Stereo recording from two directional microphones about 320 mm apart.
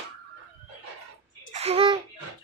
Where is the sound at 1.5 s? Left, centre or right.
Centre.